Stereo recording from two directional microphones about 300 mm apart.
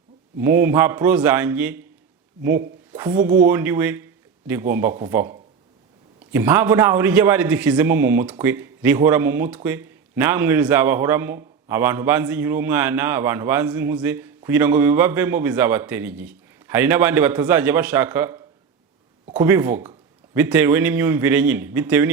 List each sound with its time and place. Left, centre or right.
0.3 s a man's voice: centre
2.9 s a man's voice: centre